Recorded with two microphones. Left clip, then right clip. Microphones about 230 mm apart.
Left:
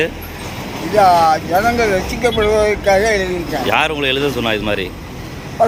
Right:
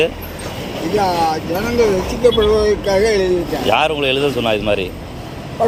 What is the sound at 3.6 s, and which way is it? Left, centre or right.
Speech, centre.